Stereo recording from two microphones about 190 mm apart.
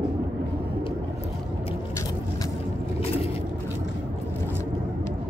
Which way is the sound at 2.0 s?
20° left (ahead or behind).